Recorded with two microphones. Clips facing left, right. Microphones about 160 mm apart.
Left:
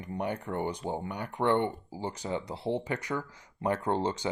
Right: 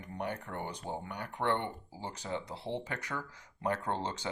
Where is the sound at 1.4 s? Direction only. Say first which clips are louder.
Left 5 dB; 55° left (ahead or behind).